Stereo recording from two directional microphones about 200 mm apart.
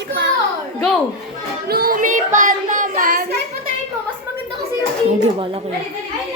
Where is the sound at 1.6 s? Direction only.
50° right (ahead or behind).